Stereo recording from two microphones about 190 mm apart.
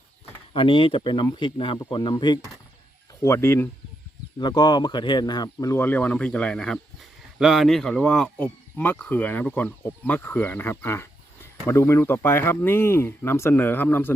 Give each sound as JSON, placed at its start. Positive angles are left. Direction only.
{"t": 0.5, "sound": "speech", "side_deg": 25}